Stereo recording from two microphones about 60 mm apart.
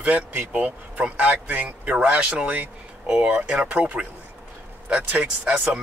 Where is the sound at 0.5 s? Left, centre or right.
Right.